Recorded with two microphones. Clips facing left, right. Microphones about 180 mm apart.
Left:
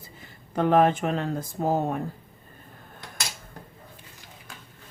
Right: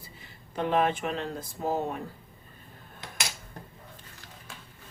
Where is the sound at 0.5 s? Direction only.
50° left (ahead or behind).